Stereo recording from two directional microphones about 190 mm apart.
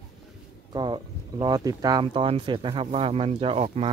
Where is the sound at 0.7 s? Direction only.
20° right (ahead or behind).